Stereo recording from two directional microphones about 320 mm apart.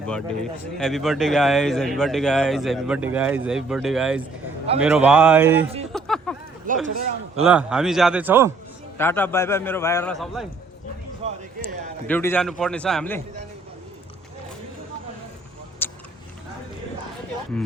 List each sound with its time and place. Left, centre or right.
0.8 s speech: centre
5.9 s a sound: centre
6.8 s speech: right
7.4 s speech: centre
9.0 s a man's voice: centre
11.2 s a sound: centre
12.0 s speech: centre
15.8 s vehicle: centre